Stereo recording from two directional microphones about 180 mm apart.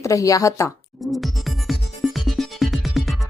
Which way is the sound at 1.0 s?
Centre (ahead or behind).